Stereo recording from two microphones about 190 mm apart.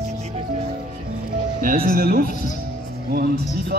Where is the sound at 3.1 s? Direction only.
50° right (ahead or behind).